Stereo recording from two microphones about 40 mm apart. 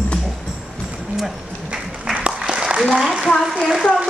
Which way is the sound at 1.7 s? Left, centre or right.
Right.